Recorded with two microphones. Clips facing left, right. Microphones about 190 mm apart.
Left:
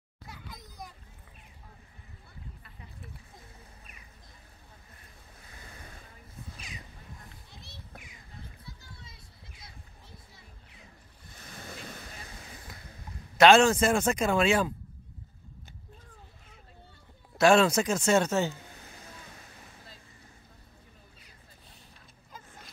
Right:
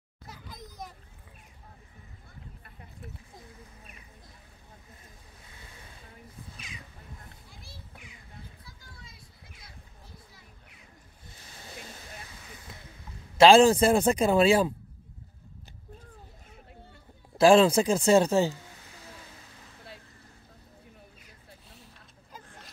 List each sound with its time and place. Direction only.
0.6 s a sound: centre (ahead or behind)
11.4 s ocean: 55° left (ahead or behind)
13.4 s speech: 30° right (ahead or behind)
17.4 s speech: 30° right (ahead or behind)